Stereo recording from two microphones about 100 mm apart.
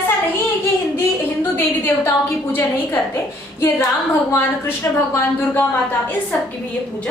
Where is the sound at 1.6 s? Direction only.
25° left (ahead or behind).